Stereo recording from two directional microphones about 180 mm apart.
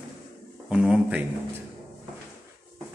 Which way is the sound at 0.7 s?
5° right (ahead or behind).